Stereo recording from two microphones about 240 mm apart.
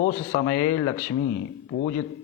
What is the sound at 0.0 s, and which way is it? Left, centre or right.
Speech, left.